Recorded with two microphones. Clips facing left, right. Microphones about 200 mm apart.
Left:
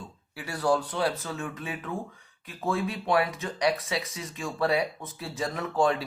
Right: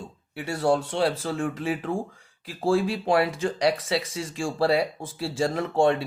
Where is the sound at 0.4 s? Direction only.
25° right (ahead or behind).